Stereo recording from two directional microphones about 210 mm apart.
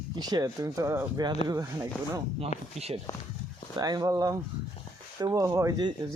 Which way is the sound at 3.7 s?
20° right (ahead or behind).